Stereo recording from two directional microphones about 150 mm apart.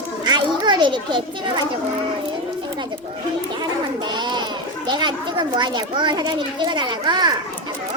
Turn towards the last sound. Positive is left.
turn(degrees=-30)  # may be behind; listen again after turning